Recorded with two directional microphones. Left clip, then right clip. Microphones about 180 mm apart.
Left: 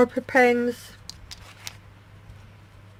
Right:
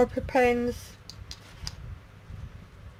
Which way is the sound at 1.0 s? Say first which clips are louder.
Left 3 dB; 50° left (ahead or behind).